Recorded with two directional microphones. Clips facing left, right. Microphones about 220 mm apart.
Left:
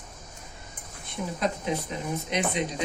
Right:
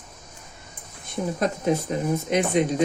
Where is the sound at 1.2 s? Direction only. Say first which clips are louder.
Right 4 dB; 45° right (ahead or behind).